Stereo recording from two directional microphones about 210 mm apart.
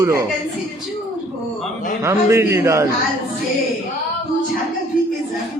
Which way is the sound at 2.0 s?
15° right (ahead or behind).